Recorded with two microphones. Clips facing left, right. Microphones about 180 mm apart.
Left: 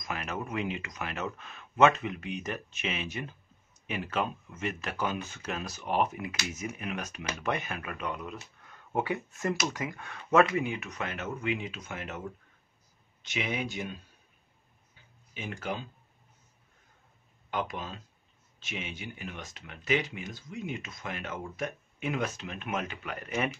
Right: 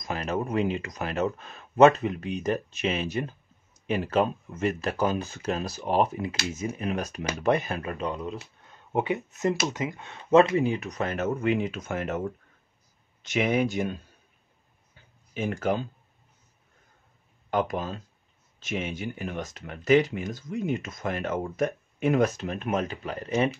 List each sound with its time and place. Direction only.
0.0 s speech: 35° right (ahead or behind)
13.2 s speech: 45° right (ahead or behind)
15.3 s speech: 45° right (ahead or behind)
17.5 s speech: 45° right (ahead or behind)